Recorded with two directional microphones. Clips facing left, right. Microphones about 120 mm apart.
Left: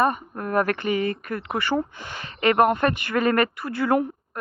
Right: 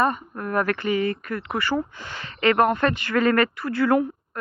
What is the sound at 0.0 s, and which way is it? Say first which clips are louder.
Speech: left 1 dB; 20° left (ahead or behind).